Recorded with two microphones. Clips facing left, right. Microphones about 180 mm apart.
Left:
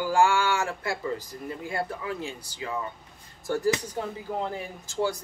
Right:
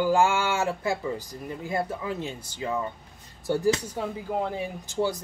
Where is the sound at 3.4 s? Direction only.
20° right (ahead or behind).